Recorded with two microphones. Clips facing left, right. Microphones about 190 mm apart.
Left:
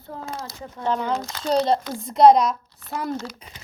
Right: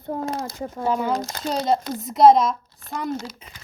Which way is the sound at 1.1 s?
45° right (ahead or behind).